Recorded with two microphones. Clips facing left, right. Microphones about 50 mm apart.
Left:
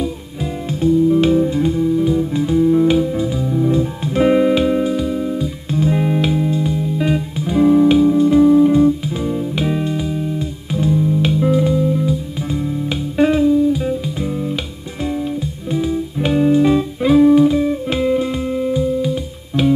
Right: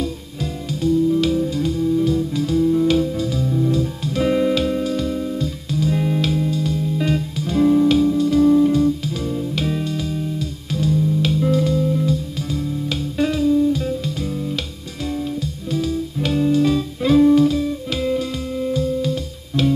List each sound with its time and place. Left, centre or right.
0.7 s music: left
5.7 s music: left
13.5 s music: centre
17.1 s music: centre